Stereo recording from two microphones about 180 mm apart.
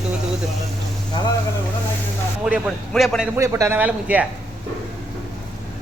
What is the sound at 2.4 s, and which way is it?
Speech, centre (ahead or behind).